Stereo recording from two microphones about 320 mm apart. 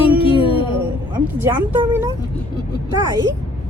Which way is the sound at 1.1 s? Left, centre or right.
Centre.